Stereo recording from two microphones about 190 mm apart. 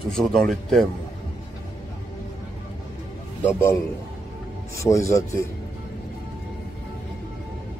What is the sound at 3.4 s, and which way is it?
Speech, 10° left (ahead or behind).